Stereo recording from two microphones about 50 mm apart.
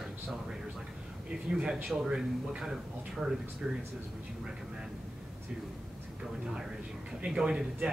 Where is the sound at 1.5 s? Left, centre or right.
Centre.